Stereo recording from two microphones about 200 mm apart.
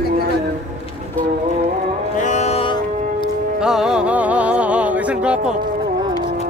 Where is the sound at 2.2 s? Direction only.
35° left (ahead or behind).